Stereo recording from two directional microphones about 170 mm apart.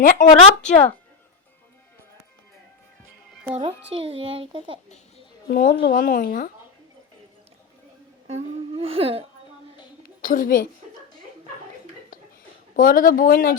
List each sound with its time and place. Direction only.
0.0 s speech: 55° left (ahead or behind)
0.4 s speech: 40° left (ahead or behind)
3.5 s a child's voice: 30° right (ahead or behind)
5.5 s speech: 60° left (ahead or behind)
8.3 s humming: 35° right (ahead or behind)
10.2 s a woman's voice: 55° left (ahead or behind)
12.7 s speech: 55° left (ahead or behind)